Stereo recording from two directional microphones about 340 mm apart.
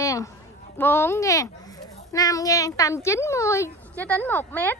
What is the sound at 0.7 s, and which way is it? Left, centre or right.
Speech, centre.